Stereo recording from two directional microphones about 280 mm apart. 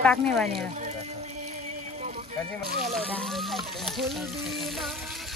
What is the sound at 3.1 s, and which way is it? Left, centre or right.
Speech, centre.